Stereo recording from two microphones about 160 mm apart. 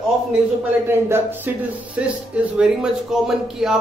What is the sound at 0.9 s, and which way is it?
A man's voice, 15° right (ahead or behind).